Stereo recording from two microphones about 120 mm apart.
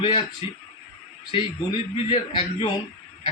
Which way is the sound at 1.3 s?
50° left (ahead or behind).